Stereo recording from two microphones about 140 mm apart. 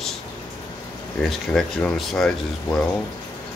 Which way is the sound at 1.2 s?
5° left (ahead or behind).